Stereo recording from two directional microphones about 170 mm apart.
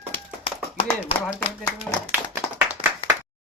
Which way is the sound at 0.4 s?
30° left (ahead or behind).